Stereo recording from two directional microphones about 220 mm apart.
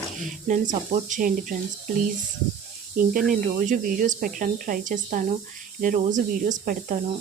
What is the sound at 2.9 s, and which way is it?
Speech, 40° right (ahead or behind).